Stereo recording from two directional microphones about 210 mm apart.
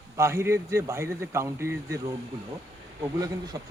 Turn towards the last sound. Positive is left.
turn(degrees=-15)  # may be behind; listen again after turning